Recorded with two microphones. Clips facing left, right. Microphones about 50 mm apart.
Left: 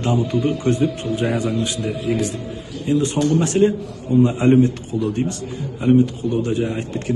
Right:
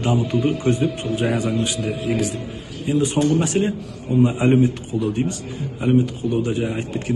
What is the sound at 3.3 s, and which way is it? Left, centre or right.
A man's voice, centre.